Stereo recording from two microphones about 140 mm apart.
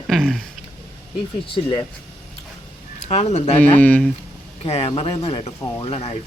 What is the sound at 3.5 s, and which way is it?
Speech, 15° left (ahead or behind).